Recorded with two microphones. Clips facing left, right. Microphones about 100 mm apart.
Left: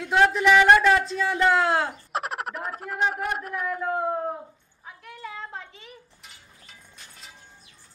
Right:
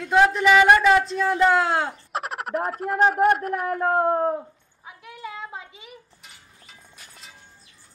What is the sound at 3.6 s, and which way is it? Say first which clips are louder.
Speech: right 5 dB; 55° right (ahead or behind).